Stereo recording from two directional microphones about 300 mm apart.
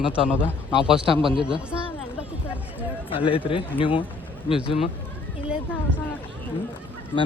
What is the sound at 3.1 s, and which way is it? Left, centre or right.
Speech, centre.